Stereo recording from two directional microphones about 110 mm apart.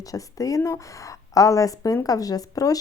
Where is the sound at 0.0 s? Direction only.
30° left (ahead or behind).